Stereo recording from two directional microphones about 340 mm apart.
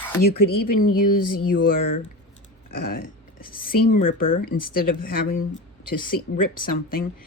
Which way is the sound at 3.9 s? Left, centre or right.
Left.